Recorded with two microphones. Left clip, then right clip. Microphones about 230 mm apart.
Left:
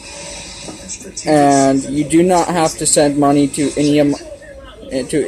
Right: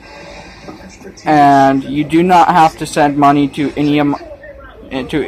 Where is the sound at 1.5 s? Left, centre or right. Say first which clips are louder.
Right 4 dB; right.